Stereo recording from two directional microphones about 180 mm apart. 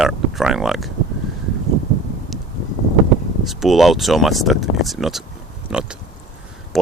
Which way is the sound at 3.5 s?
Centre (ahead or behind).